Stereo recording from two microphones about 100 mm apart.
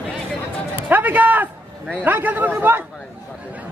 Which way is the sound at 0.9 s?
15° right (ahead or behind).